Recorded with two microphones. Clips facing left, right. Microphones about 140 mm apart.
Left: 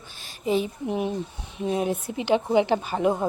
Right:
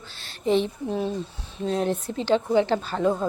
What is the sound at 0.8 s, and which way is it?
Speech, 15° left (ahead or behind).